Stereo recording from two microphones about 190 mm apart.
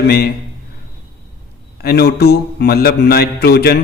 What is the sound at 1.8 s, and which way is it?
Mantra, 55° left (ahead or behind).